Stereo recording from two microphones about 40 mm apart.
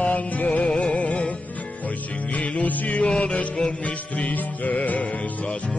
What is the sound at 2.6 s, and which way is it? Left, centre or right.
Music, left.